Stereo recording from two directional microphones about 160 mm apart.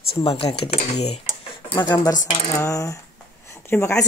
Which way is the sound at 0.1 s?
35° left (ahead or behind).